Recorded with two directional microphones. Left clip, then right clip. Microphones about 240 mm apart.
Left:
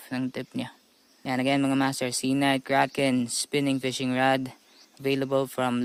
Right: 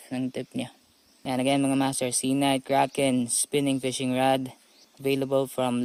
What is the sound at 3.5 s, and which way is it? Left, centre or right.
Speech, left.